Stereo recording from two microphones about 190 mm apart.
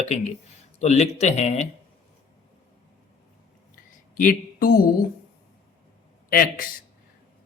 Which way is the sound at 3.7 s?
45° left (ahead or behind).